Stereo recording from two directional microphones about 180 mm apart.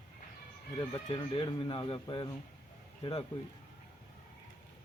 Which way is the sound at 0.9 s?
25° left (ahead or behind).